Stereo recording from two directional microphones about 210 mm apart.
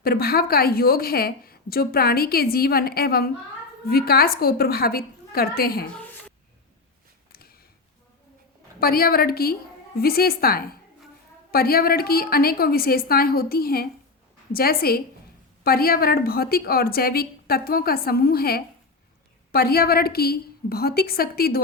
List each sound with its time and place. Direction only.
0.0 s a woman's voice: 45° left (ahead or behind)
5.9 s a sound: 5° left (ahead or behind)
8.8 s a woman's voice: 45° left (ahead or behind)